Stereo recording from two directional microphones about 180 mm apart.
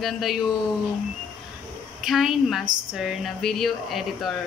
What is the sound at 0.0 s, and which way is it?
Speech, centre (ahead or behind).